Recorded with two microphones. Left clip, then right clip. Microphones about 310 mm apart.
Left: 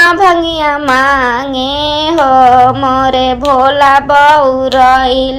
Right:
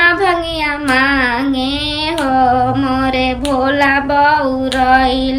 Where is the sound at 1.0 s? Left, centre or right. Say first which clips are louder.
Left 2 dB; centre.